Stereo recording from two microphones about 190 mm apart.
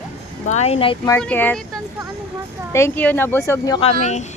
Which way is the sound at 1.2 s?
10° left (ahead or behind).